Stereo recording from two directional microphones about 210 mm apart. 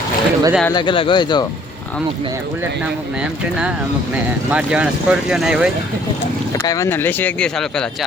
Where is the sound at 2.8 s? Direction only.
5° right (ahead or behind).